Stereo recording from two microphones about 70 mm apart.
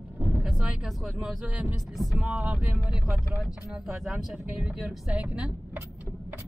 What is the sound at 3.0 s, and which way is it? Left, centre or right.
Speech, centre.